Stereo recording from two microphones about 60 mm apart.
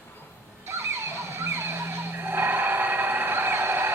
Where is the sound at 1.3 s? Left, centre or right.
Right.